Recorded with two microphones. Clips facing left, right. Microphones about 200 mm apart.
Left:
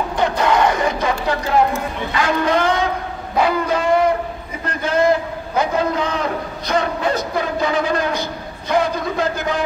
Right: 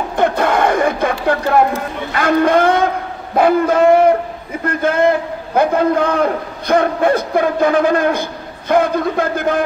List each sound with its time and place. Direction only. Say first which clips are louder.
0.2 s music: right 2 dB; 50° right (ahead or behind)
2.1 s a man's voice: right 5 dB; 55° right (ahead or behind)